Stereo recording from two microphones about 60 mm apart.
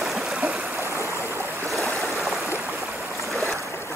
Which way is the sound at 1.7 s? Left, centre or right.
Centre.